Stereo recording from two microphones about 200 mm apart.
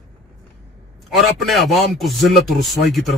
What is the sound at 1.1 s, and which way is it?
A man's voice, centre (ahead or behind).